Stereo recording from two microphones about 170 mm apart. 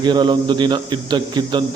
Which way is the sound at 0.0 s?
25° right (ahead or behind).